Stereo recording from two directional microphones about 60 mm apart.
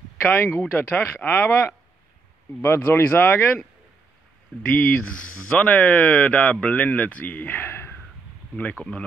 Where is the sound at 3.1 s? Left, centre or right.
Left.